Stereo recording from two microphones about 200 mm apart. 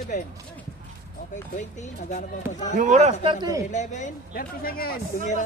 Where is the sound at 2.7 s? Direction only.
35° right (ahead or behind).